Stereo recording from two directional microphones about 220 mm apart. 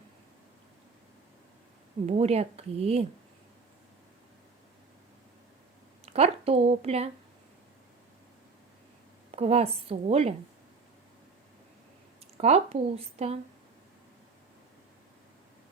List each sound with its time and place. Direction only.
2.0 s speech: 30° right (ahead or behind)
6.1 s speech: 25° right (ahead or behind)
9.3 s speech: 30° right (ahead or behind)
12.4 s speech: 30° right (ahead or behind)